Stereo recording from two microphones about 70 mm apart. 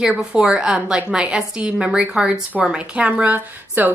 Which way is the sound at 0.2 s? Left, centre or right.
Centre.